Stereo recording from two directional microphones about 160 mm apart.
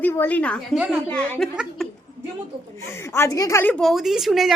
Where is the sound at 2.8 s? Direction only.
15° left (ahead or behind); by 4.5 s centre (ahead or behind).